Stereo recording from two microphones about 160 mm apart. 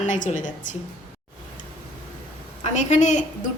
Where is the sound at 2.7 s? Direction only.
50° left (ahead or behind).